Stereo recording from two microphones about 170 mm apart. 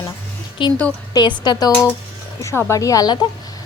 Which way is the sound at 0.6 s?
30° left (ahead or behind).